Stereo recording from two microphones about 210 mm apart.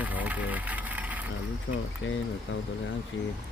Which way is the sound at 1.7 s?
55° left (ahead or behind).